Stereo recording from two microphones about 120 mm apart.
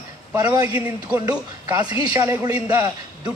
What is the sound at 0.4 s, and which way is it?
Speech, 35° right (ahead or behind).